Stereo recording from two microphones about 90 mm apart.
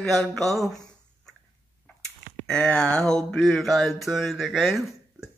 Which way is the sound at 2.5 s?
10° left (ahead or behind).